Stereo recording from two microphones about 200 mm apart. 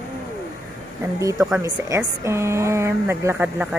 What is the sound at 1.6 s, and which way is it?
Speech, 15° right (ahead or behind).